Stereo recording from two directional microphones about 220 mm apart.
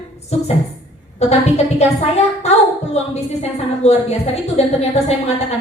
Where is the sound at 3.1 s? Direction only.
30° left (ahead or behind).